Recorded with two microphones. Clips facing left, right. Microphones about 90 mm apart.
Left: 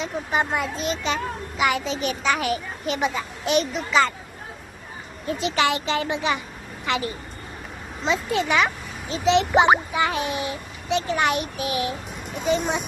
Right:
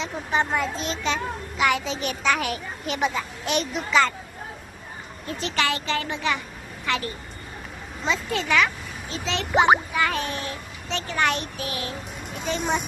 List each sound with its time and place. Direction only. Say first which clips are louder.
0.0 s a child's voice: left 1 dB; 5° left (ahead or behind)
5.4 s a child's voice: left 3 dB; 15° left (ahead or behind)
8.0 s a child's voice: left 3 dB; 15° left (ahead or behind)